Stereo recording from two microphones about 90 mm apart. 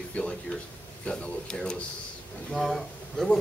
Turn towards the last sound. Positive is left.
turn(degrees=5)  # may be behind; listen again after turning